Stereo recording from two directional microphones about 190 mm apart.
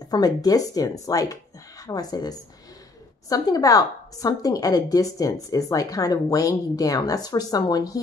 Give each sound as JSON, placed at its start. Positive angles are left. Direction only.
{"t": 0.1, "sound": "speech", "side_deg": 20}